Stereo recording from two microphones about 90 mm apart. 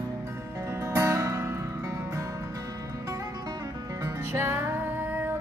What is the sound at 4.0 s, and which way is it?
Music, 25° right (ahead or behind).